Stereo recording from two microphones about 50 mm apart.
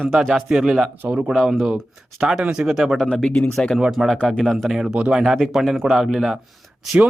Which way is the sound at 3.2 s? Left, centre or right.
Left.